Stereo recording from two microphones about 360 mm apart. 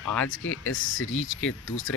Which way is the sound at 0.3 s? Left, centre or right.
Left.